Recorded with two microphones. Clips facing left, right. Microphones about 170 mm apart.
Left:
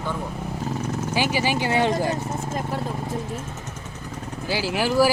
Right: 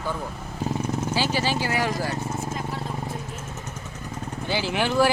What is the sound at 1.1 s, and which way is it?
Speech, 15° left (ahead or behind).